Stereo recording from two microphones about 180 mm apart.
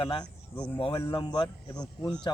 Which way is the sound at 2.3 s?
25° left (ahead or behind).